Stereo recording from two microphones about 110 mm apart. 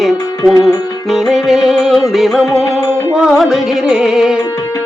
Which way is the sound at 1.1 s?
Centre (ahead or behind).